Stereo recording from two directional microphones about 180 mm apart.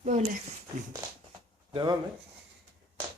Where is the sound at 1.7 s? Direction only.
25° right (ahead or behind).